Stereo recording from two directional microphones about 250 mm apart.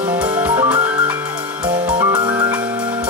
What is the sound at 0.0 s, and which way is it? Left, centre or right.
Music, centre.